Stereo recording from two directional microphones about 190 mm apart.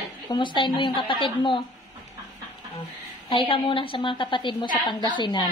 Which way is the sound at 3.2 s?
25° left (ahead or behind).